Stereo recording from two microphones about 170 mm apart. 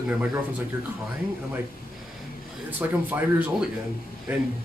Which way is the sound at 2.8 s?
10° right (ahead or behind).